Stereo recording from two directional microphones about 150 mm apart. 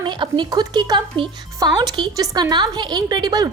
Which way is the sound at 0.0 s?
30° right (ahead or behind).